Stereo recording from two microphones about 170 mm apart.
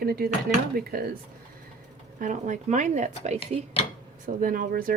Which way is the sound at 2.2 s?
50° right (ahead or behind).